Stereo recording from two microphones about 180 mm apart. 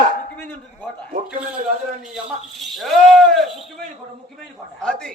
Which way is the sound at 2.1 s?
Centre (ahead or behind).